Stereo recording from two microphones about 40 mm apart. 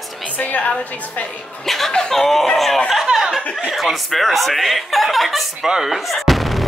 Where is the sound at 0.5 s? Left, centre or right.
Left.